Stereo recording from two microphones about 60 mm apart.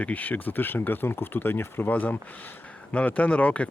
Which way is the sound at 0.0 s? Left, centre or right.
Left.